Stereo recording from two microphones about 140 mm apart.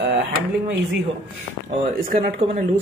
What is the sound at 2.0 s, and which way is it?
Speech, 90° right.